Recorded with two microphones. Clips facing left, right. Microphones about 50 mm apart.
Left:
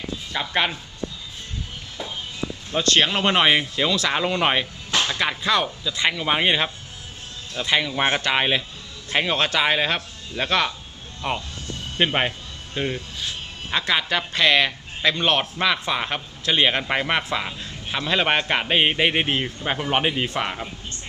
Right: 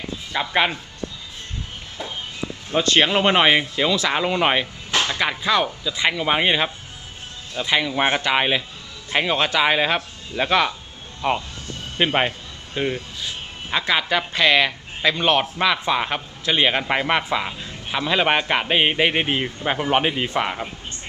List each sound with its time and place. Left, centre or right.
0.3 s a man's voice: centre
2.7 s a man's voice: right
11.9 s a man's voice: centre